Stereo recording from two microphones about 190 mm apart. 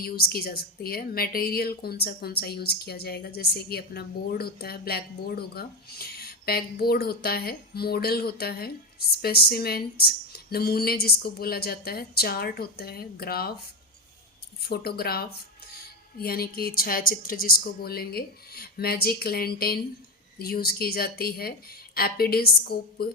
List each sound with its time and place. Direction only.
0.0 s a woman's voice: 55° left (ahead or behind)
14.6 s a woman's voice: 55° left (ahead or behind)